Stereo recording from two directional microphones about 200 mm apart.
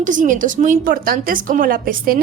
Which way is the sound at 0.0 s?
40° right (ahead or behind).